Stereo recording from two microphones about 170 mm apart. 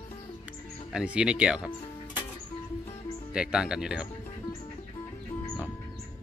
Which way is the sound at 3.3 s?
5° right (ahead or behind).